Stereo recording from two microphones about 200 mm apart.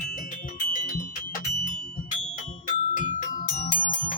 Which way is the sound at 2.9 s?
40° left (ahead or behind).